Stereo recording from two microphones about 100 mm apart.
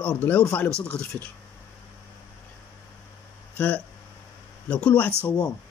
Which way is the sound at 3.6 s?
15° left (ahead or behind).